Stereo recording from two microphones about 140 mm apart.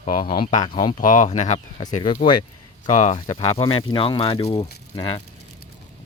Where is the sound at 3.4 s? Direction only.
40° left (ahead or behind).